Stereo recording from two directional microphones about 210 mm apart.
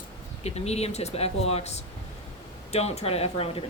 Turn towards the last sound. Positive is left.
turn(degrees=30)  # may be behind; listen again after turning